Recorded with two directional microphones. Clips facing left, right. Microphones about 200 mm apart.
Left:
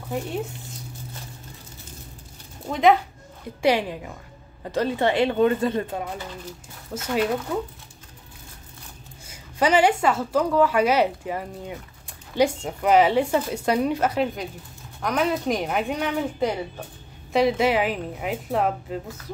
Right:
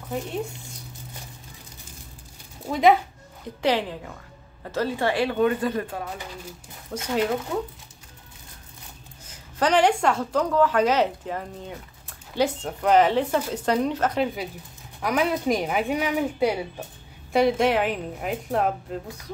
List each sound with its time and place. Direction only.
2.6 s speech: centre (ahead or behind)
3.6 s a woman's voice: 15° left (ahead or behind)
6.9 s a woman's voice: 5° left (ahead or behind)
9.2 s a woman's voice: 10° left (ahead or behind)